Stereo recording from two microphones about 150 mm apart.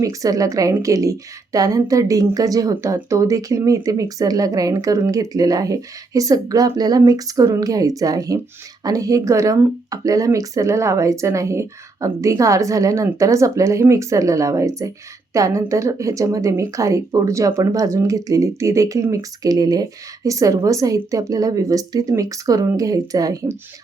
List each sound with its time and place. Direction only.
0.0 s speech: 20° right (ahead or behind)